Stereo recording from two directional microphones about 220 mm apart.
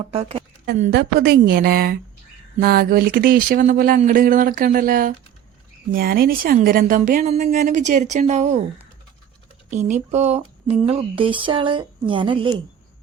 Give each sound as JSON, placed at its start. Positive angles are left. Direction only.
{"t": 0.1, "sound": "speech", "side_deg": -25}
{"t": 0.9, "sound": "a woman's voice", "side_deg": -45}
{"t": 9.6, "sound": "speech", "side_deg": -35}